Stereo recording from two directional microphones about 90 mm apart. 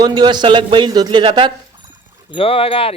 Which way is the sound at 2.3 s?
90° left.